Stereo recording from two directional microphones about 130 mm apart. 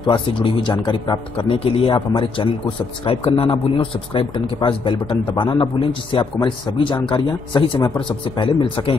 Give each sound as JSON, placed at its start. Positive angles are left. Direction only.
{"t": 0.0, "sound": "a man's voice", "side_deg": 40}